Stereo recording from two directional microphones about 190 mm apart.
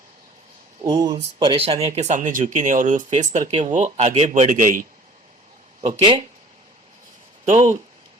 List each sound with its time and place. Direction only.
0.9 s speech: 20° right (ahead or behind); by 4.9 s 45° right (ahead or behind)
6.0 s speech: 25° right (ahead or behind)
7.4 s speech: 40° right (ahead or behind)